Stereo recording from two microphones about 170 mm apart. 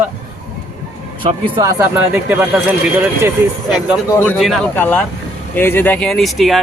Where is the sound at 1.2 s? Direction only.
30° right (ahead or behind); by 2.4 s 10° right (ahead or behind).